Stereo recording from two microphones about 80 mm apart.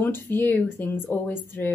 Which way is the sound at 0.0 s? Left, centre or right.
Left.